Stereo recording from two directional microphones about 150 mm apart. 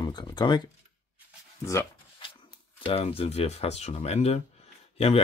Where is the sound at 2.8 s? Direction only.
40° left (ahead or behind).